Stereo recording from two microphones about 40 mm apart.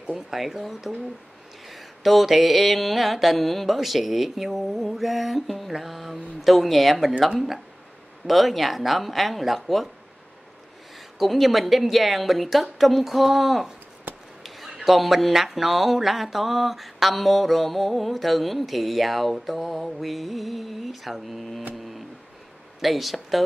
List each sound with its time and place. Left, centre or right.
0.4 s speech: centre
1.7 s mantra: centre
11.0 s mantra: centre
14.1 s a sound: right
14.4 s a sound: centre
14.9 s mantra: centre
22.8 s mantra: centre